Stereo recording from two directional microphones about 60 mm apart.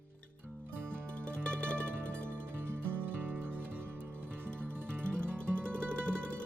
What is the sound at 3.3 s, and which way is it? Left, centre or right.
Music, right.